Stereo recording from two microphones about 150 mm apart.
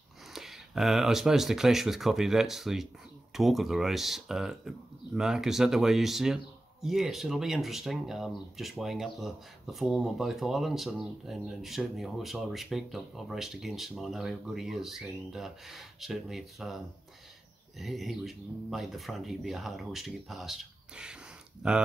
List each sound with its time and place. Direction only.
0.3 s speech: centre (ahead or behind)